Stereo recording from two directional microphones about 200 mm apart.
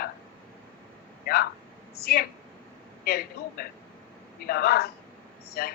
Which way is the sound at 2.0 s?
50° left (ahead or behind).